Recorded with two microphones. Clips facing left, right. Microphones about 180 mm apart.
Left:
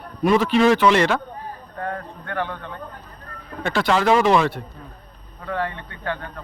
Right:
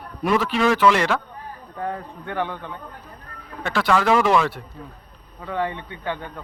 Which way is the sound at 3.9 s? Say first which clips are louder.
Left 1 dB; 25° left (ahead or behind).